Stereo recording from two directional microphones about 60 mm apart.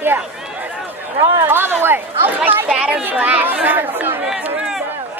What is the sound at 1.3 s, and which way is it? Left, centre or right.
Speech, right.